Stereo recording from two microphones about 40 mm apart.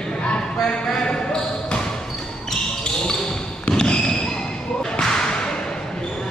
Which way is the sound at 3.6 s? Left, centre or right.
Left.